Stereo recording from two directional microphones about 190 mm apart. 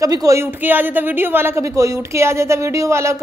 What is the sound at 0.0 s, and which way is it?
A woman's voice, 20° right (ahead or behind).